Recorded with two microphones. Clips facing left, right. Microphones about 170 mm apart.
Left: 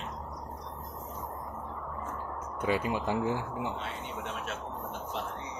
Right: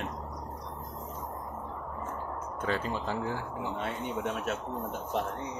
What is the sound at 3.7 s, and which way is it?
Speech, 50° right (ahead or behind).